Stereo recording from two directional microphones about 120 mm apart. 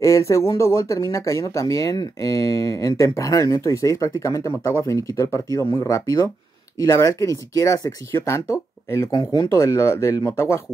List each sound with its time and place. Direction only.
0.0 s speech: 25° left (ahead or behind)